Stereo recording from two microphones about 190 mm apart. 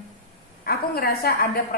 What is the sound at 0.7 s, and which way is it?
A woman's voice, 55° left (ahead or behind).